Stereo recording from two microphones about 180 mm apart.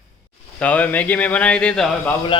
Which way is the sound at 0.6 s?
10° left (ahead or behind).